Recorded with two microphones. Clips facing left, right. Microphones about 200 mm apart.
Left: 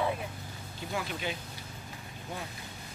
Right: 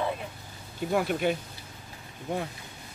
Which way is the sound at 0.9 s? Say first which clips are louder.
Right 9 dB; 55° right (ahead or behind).